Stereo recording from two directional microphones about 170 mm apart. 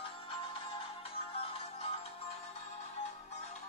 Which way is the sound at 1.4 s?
35° left (ahead or behind).